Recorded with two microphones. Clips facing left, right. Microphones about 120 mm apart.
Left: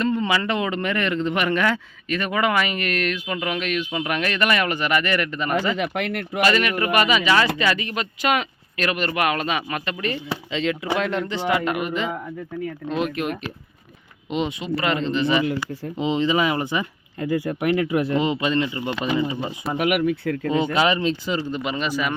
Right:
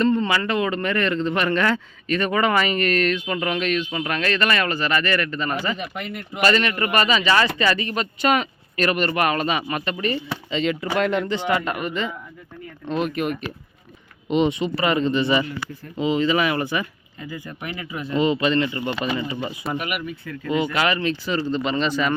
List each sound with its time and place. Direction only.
0.0 s speech: 10° left (ahead or behind)
5.7 s speech: 85° left
6.4 s speech: 5° left (ahead or behind)
16.0 s speech: 20° left (ahead or behind)
17.2 s speech: 75° left (ahead or behind)
18.2 s speech: 15° left (ahead or behind)
19.7 s speech: 85° left
20.7 s speech: 20° left (ahead or behind)